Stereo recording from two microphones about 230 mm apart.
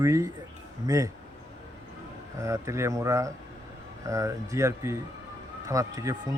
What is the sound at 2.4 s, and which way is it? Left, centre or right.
Speech, centre.